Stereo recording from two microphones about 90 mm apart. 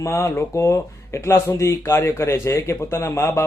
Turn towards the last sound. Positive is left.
turn(degrees=30)  # may be behind; listen again after turning